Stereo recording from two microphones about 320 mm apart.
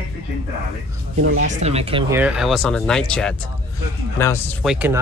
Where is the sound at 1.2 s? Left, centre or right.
Right.